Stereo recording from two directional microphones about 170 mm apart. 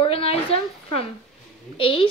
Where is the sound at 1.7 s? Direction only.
30° left (ahead or behind).